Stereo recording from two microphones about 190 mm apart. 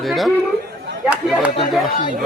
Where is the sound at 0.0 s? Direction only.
Centre (ahead or behind).